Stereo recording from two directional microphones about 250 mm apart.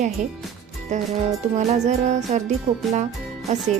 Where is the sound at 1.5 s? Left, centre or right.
Right.